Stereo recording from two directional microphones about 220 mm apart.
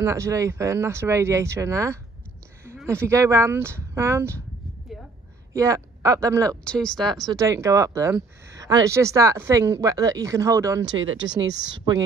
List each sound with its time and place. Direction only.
0.0 s speech: 15° right (ahead or behind)
5.5 s speech: 15° right (ahead or behind)
6.6 s speech: 5° left (ahead or behind)
7.2 s speech: 15° right (ahead or behind)
11.0 s speech: 60° right (ahead or behind)